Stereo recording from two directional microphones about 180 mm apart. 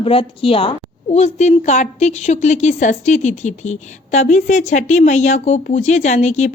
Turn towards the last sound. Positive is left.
turn(degrees=40)  # may be behind; listen again after turning